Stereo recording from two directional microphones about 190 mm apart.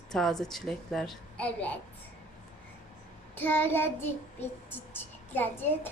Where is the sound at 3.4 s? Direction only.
10° left (ahead or behind).